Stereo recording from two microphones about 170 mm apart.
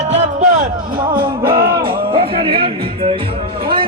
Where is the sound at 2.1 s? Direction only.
35° right (ahead or behind).